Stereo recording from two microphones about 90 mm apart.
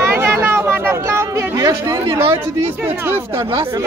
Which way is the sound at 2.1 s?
25° right (ahead or behind).